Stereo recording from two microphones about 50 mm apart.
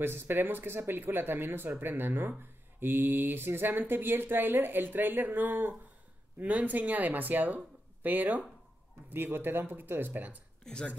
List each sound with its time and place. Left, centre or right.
0.0 s speech: right
10.6 s speech: centre